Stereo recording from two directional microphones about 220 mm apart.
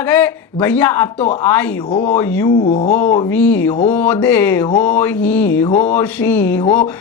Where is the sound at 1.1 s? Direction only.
30° left (ahead or behind).